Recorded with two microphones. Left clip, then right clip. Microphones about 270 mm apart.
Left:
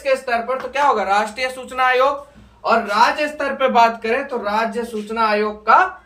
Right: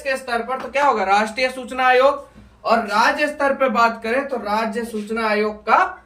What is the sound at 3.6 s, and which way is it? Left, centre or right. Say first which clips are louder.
Speech: left 7 dB; centre.